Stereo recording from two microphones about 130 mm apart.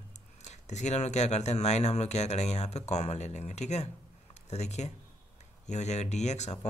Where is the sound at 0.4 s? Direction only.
60° left (ahead or behind).